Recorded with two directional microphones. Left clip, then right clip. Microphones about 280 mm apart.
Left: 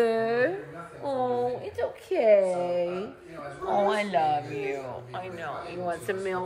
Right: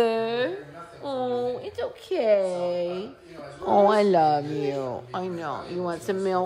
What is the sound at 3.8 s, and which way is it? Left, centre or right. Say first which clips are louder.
Speech: right 6 dB; right.